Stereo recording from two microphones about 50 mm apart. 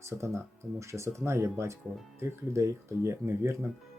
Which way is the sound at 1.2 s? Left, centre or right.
Right.